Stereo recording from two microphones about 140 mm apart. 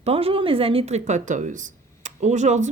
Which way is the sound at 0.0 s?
45° right (ahead or behind).